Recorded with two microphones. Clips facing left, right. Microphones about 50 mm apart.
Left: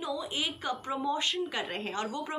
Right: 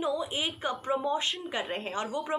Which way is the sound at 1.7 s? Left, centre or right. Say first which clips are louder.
Right 1 dB; centre.